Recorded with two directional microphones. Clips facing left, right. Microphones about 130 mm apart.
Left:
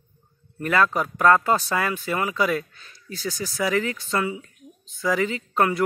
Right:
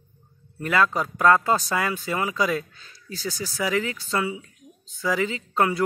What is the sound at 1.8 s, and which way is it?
Speech, 20° right (ahead or behind).